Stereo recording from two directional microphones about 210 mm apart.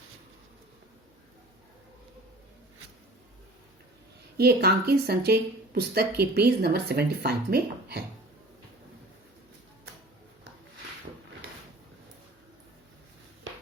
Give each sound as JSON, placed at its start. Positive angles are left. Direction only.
{"t": 4.4, "sound": "speech", "side_deg": -50}